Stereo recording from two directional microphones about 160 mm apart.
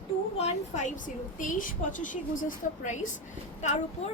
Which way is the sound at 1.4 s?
55° left (ahead or behind).